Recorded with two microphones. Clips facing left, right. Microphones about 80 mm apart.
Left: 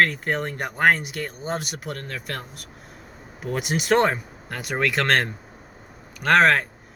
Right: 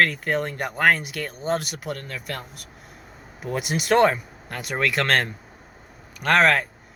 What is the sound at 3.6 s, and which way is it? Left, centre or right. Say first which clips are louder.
Speech: right 1 dB; left.